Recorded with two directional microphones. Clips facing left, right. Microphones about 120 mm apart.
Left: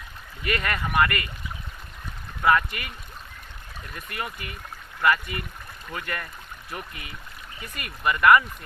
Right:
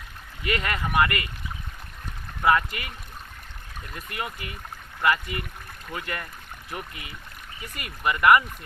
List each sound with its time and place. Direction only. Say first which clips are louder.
0.4 s speech: even; 25° right (ahead or behind)
2.4 s speech: even; 25° right (ahead or behind)
3.9 s speech: even; 25° right (ahead or behind)